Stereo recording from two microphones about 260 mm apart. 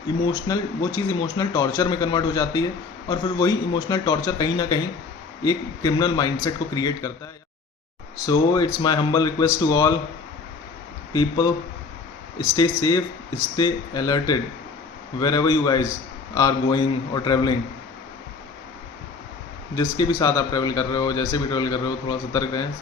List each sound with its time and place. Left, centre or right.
0.4 s a man's voice: centre
8.3 s a man's voice: centre
11.1 s a man's voice: centre
19.7 s a man's voice: centre